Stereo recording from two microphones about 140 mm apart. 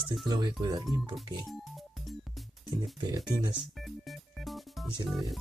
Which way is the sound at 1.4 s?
Centre (ahead or behind).